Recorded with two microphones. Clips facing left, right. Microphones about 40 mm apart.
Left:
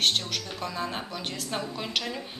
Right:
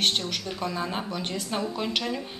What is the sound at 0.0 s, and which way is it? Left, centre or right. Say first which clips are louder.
A woman's voice: even; centre.